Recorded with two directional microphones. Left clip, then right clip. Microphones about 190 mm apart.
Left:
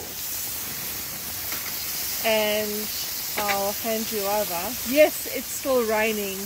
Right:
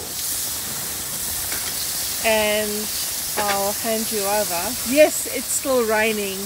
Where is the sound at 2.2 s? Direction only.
10° left (ahead or behind).